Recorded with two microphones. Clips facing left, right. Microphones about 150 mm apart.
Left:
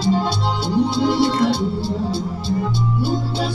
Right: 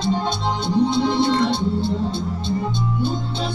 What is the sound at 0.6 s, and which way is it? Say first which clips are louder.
Music: even; 20° right (ahead or behind).